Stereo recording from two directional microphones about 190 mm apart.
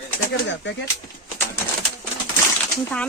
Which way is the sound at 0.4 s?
65° left (ahead or behind).